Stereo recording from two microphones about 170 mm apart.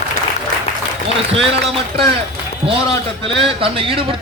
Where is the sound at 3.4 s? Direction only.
35° right (ahead or behind).